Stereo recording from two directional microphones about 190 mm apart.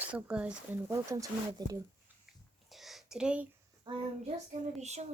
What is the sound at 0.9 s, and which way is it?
Speech, 15° right (ahead or behind).